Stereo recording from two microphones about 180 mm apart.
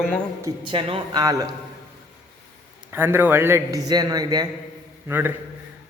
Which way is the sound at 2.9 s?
10° right (ahead or behind).